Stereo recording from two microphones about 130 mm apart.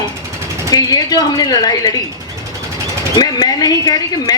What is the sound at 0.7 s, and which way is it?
Speech, 30° left (ahead or behind).